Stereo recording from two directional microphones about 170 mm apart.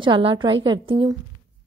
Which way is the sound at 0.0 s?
30° right (ahead or behind).